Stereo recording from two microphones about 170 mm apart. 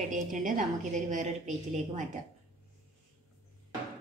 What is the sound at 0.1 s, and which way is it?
A woman's voice, 50° right (ahead or behind).